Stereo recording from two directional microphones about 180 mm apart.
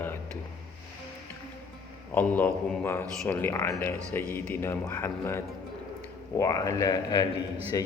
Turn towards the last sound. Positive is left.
turn(degrees=20)  # may be behind; listen again after turning